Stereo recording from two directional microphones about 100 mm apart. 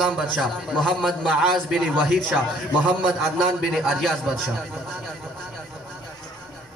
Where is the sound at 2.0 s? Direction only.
Centre (ahead or behind).